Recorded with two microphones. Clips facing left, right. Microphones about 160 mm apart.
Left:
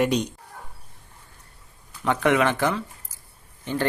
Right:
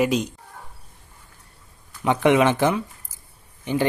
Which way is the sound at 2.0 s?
20° right (ahead or behind).